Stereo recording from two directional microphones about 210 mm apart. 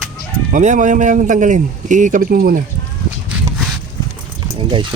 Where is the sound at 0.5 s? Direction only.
35° right (ahead or behind).